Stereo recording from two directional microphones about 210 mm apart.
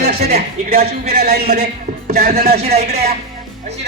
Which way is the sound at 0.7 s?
45° right (ahead or behind).